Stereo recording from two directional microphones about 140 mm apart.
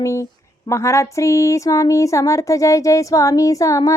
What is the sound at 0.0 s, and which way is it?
Speech, 20° left (ahead or behind).